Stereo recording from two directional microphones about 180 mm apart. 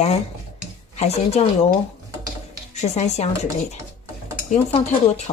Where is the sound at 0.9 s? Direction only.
35° left (ahead or behind).